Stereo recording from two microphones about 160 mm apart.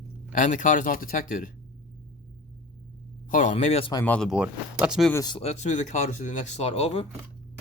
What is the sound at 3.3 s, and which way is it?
Speech, 50° left (ahead or behind).